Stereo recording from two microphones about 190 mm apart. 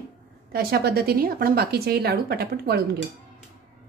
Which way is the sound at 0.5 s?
55° right (ahead or behind).